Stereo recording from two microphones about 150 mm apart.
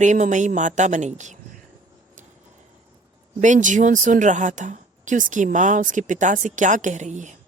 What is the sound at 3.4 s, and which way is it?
A woman's voice, 55° right (ahead or behind).